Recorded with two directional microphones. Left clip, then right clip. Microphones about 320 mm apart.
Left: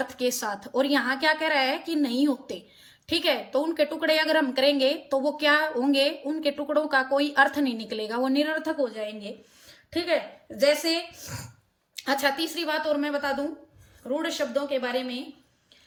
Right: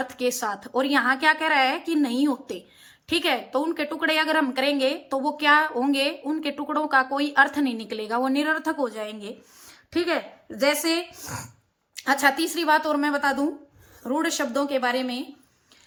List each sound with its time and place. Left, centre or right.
0.0 s a woman's voice: centre